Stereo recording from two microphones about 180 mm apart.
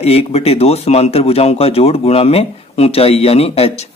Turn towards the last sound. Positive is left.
turn(degrees=35)  # may be behind; listen again after turning